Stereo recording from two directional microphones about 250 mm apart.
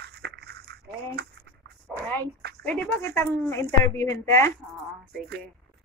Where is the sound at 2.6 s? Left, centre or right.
Centre.